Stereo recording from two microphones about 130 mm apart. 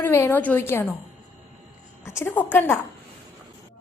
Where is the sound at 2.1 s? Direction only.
20° left (ahead or behind).